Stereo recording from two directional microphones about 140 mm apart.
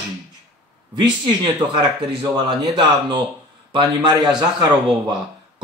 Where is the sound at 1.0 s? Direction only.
35° right (ahead or behind).